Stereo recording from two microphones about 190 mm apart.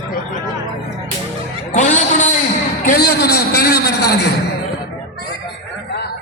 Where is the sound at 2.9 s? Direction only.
55° left (ahead or behind).